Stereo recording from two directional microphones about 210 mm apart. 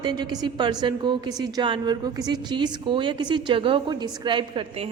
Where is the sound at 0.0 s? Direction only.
20° right (ahead or behind).